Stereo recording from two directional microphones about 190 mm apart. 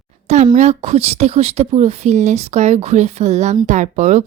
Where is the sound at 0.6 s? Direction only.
35° right (ahead or behind).